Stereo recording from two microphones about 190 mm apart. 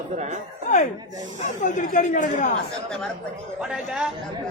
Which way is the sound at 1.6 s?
40° left (ahead or behind).